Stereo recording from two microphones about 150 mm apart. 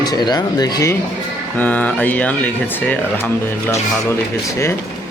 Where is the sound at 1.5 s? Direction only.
10° left (ahead or behind).